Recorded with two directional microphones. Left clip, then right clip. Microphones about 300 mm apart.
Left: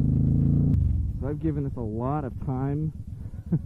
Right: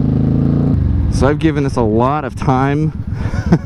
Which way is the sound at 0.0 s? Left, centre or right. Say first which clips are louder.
Right 11 dB; centre.